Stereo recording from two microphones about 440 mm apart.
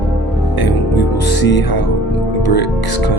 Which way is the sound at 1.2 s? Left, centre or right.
Left.